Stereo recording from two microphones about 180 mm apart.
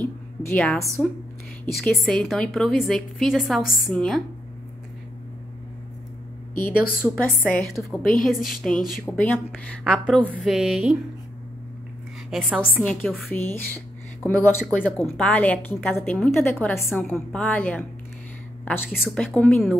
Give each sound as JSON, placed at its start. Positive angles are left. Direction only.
{"t": 0.0, "sound": "a sound", "side_deg": 5}
{"t": 1.7, "sound": "a woman's voice", "side_deg": 0}
{"t": 7.2, "sound": "a woman's voice", "side_deg": 10}
{"t": 12.3, "sound": "a woman's voice", "side_deg": 0}
{"t": 13.3, "sound": "a woman's voice", "side_deg": 10}